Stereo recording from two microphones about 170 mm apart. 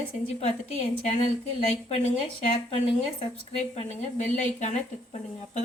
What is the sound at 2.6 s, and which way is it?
Speech, 35° left (ahead or behind).